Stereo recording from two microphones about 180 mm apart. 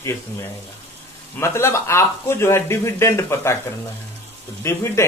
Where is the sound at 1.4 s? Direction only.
15° left (ahead or behind).